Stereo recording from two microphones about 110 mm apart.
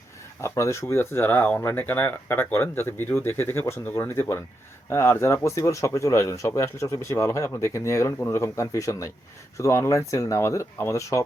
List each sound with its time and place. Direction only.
0.4 s speech: 25° left (ahead or behind)